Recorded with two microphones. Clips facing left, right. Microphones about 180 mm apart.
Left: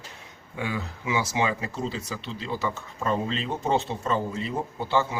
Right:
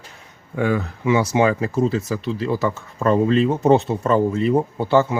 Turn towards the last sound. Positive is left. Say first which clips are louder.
# right 8 dB
turn(degrees=-60)  # may be behind; listen again after turning